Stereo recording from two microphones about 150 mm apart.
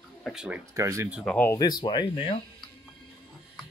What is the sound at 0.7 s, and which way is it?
Speech, 20° right (ahead or behind).